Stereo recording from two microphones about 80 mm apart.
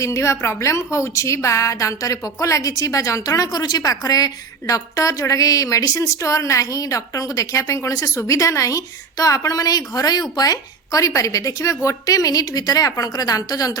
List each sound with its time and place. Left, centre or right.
0.0 s a woman's voice: left